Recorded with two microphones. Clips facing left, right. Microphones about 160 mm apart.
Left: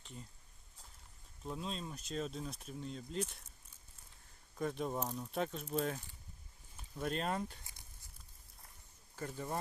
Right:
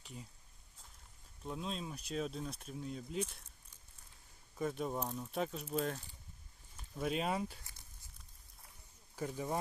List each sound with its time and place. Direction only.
0.0 s speech: 5° right (ahead or behind)
1.5 s speech: centre (ahead or behind)
4.5 s speech: centre (ahead or behind)
9.1 s speech: 10° right (ahead or behind)